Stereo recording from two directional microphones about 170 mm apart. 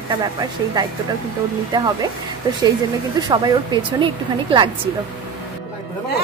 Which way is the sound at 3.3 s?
25° right (ahead or behind).